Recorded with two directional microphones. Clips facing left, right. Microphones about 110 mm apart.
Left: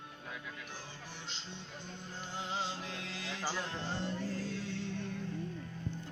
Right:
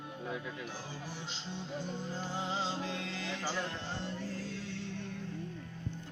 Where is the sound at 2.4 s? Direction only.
Centre (ahead or behind).